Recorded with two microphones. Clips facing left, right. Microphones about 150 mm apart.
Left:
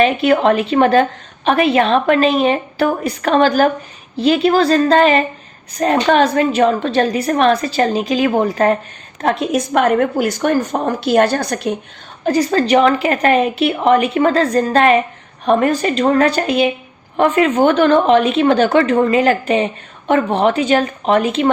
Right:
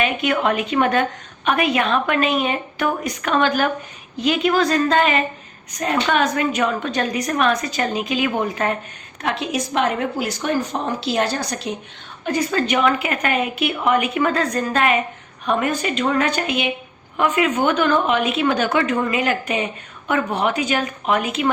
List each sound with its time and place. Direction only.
0.0 s a woman's voice: 35° left (ahead or behind)
9.2 s speech: 50° left (ahead or behind)
12.2 s a woman's voice: 35° left (ahead or behind)